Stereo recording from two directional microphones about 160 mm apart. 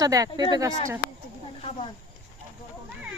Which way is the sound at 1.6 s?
40° left (ahead or behind).